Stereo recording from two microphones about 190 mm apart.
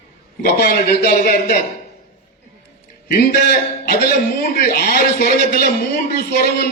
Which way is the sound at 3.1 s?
45° left (ahead or behind).